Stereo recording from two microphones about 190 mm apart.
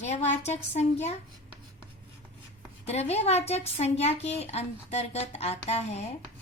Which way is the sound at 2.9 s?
35° left (ahead or behind).